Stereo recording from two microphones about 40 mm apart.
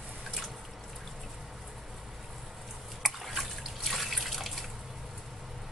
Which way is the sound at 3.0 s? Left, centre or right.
Centre.